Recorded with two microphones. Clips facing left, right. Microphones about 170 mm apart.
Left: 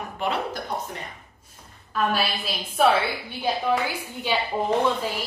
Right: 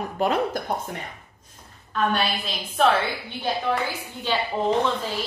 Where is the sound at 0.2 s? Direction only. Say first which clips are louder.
Right 4 dB; 45° right (ahead or behind).